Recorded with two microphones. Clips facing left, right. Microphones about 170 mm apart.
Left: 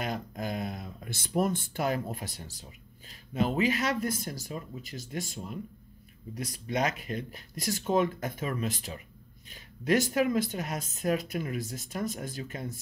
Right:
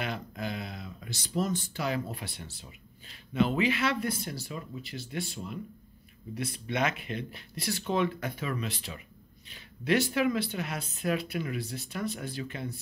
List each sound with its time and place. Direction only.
0.0 s speech: 45° left (ahead or behind)